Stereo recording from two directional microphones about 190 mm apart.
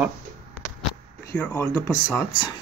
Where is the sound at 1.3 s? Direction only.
10° left (ahead or behind).